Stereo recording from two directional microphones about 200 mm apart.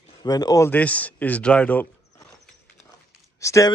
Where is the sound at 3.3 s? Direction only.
15° left (ahead or behind).